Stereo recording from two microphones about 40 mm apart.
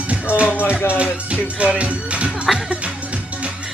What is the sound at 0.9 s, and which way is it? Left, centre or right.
Music, right.